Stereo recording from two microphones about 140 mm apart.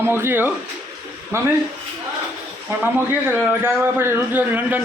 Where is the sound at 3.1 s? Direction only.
15° right (ahead or behind).